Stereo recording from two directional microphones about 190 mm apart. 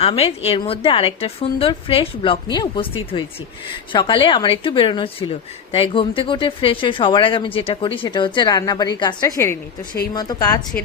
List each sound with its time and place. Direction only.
0.0 s a woman's voice: 30° left (ahead or behind)